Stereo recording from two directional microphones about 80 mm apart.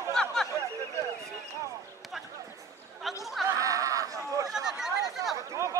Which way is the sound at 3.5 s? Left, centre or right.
Right.